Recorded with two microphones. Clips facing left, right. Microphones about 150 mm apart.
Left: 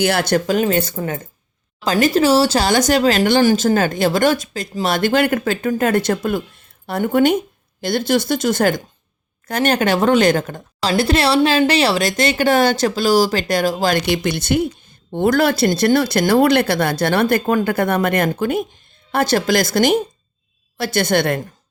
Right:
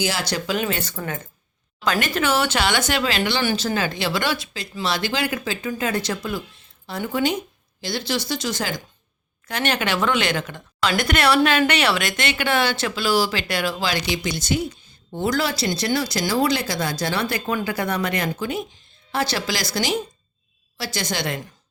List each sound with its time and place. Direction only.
0.0 s speech: 60° left (ahead or behind)
0.9 s a woman's voice: 30° left (ahead or behind); by 8.8 s 55° left (ahead or behind)
9.5 s a woman's voice: 45° left (ahead or behind)